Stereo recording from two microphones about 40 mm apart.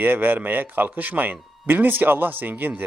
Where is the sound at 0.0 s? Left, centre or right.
Right.